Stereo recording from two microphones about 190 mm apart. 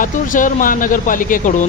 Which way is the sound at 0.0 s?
45° left (ahead or behind).